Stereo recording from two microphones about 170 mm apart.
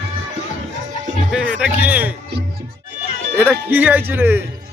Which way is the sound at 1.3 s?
5° right (ahead or behind).